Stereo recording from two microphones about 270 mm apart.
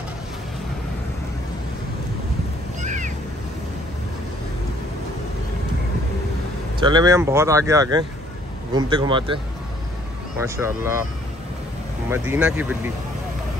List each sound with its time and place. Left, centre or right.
2.8 s a sound: right
6.8 s speech: centre
10.4 s speech: centre
12.1 s speech: centre